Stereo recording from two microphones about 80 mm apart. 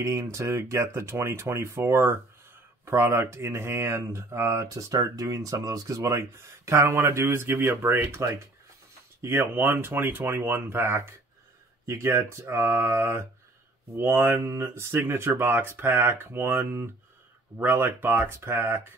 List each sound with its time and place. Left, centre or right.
0.0 s speech: right